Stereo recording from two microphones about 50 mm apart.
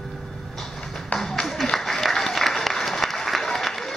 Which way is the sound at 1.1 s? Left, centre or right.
Centre.